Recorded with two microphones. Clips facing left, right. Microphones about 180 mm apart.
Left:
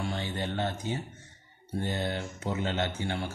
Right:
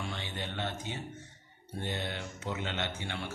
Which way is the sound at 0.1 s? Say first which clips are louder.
Left 6 dB; 40° left (ahead or behind).